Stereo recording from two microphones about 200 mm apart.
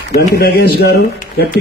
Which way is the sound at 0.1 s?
50° left (ahead or behind).